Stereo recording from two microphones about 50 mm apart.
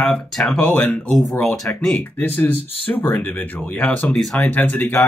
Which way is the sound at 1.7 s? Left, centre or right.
Left.